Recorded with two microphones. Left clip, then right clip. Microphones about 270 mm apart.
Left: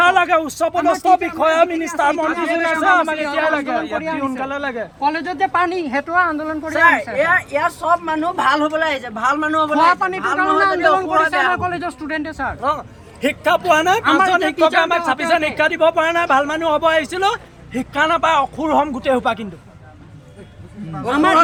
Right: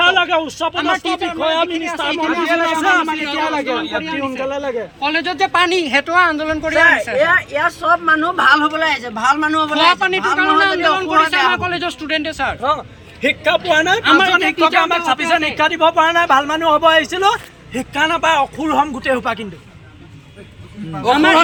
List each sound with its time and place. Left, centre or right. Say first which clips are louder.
0.0 s a sound: even; centre
0.6 s speech: left 1 dB; centre
2.6 s speech: even; centre
6.7 s speech: right 1 dB; centre
10.3 s speech: even; centre
20.9 s speech: right 3 dB; centre